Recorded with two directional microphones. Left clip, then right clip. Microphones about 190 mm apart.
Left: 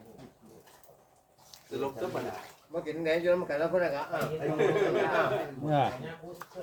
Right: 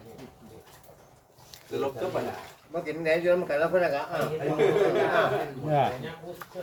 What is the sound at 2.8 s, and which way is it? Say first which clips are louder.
Speech: right 3 dB; 20° left (ahead or behind).